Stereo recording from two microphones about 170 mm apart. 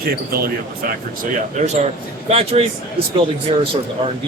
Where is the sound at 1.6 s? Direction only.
40° right (ahead or behind).